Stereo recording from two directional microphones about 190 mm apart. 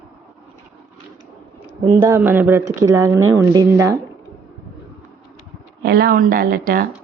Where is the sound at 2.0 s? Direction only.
10° right (ahead or behind).